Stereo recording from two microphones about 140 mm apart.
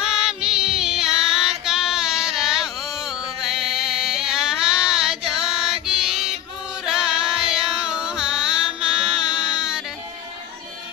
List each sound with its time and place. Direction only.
0.0 s music: 5° right (ahead or behind)
1.7 s child singing: 5° right (ahead or behind)
3.3 s music: 5° right (ahead or behind)